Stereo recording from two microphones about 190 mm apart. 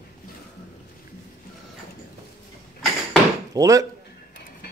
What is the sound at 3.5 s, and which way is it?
Speech, 20° right (ahead or behind).